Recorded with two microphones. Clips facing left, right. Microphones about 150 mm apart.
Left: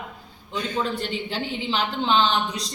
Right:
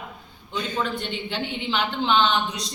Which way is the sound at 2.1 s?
35° left (ahead or behind).